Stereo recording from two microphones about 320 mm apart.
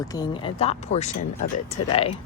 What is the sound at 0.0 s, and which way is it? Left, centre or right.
Speech, centre.